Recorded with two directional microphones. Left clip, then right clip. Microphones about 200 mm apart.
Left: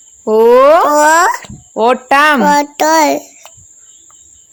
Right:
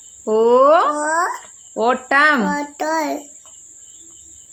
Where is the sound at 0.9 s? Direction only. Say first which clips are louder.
Left 11 dB; 50° left (ahead or behind).